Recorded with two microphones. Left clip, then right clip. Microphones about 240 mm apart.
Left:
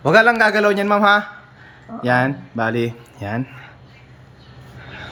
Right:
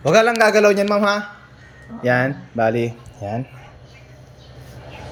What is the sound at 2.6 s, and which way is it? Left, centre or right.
Speech, centre.